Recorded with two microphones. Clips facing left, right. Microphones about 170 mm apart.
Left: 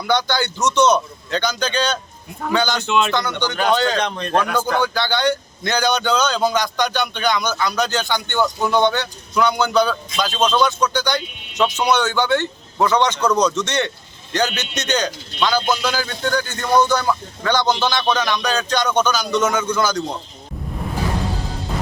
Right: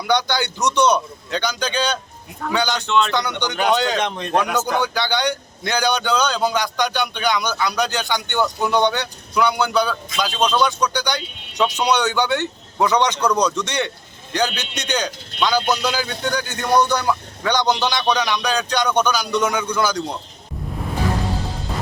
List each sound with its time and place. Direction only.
0.1 s speech: 15° right (ahead or behind)
2.8 s speech: 5° left (ahead or behind)
3.2 s speech: 15° right (ahead or behind)